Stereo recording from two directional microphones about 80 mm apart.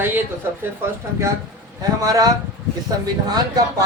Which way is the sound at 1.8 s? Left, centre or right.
Right.